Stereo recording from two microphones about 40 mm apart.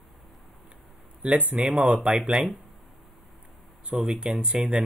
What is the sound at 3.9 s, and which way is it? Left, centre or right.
Speech, centre.